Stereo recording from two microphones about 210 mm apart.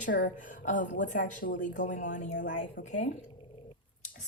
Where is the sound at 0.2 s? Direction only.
40° left (ahead or behind).